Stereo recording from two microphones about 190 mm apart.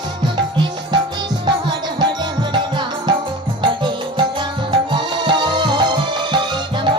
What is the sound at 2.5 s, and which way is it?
Music, 25° right (ahead or behind).